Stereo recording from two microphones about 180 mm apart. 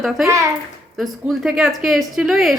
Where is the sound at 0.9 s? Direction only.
Centre (ahead or behind).